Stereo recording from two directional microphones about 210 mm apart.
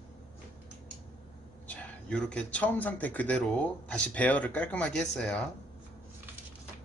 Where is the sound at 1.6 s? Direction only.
5° left (ahead or behind).